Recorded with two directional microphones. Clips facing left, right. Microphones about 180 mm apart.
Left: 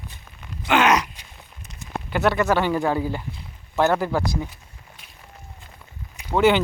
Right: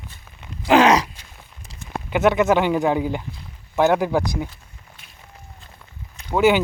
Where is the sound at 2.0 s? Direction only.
20° right (ahead or behind).